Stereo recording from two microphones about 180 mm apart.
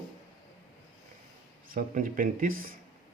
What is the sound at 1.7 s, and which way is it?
Speech, 50° right (ahead or behind).